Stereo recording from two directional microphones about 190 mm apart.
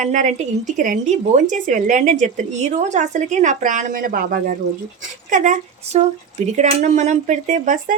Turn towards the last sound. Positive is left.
turn(degrees=-40)  # may be behind; listen again after turning